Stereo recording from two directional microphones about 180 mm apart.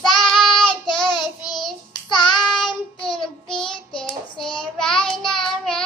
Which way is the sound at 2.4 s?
5° left (ahead or behind).